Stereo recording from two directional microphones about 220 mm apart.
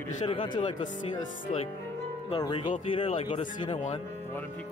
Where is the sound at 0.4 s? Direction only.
20° left (ahead or behind).